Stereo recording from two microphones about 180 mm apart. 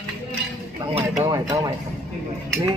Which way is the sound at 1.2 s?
20° right (ahead or behind).